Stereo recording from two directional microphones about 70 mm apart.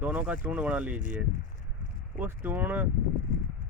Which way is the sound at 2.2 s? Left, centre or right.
Right.